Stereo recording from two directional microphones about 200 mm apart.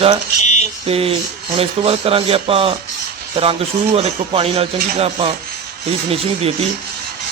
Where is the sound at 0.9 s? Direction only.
30° right (ahead or behind).